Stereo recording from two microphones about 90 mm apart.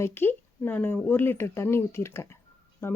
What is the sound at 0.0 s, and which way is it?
A woman's voice, 25° left (ahead or behind).